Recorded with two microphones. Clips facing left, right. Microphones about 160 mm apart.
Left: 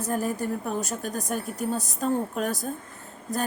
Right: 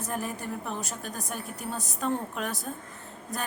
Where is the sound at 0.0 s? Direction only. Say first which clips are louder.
Left 6 dB; 40° left (ahead or behind).